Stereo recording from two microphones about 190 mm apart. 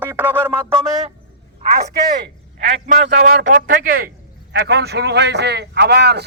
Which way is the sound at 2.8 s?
45° right (ahead or behind).